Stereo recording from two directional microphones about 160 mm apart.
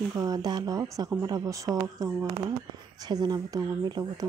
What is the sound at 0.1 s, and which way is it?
A woman's voice, 25° right (ahead or behind).